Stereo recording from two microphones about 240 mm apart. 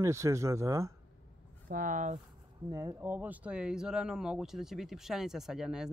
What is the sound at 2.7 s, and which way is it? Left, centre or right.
Speech, centre.